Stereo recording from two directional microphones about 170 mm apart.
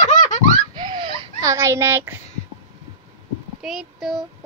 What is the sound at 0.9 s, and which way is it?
Baby cry, 30° right (ahead or behind).